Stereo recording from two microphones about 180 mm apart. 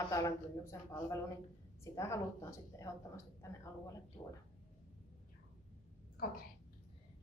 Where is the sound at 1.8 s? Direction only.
15° left (ahead or behind).